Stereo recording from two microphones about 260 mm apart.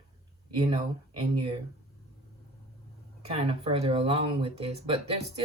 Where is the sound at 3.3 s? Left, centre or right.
Right.